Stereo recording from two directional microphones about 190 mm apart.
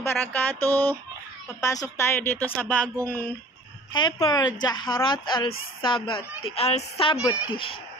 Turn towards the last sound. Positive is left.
turn(degrees=30)  # may be behind; listen again after turning